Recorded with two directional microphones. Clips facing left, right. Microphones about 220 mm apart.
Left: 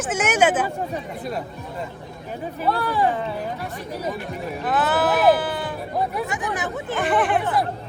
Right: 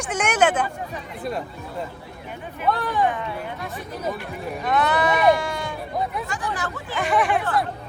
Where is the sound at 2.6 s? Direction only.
30° left (ahead or behind).